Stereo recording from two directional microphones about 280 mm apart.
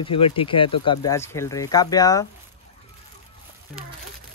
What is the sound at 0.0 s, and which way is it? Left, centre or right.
Speech, centre.